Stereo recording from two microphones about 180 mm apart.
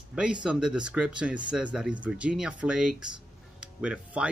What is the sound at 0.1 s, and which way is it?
Speech, 5° right (ahead or behind).